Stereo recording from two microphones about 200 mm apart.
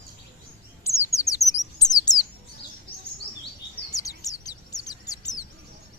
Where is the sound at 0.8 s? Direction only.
15° left (ahead or behind).